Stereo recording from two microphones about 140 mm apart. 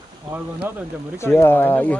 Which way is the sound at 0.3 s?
10° right (ahead or behind).